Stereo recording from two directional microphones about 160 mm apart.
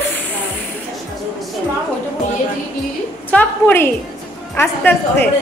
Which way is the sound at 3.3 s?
15° left (ahead or behind).